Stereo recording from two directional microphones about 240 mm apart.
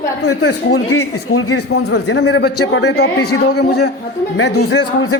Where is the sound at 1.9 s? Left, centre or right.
Left.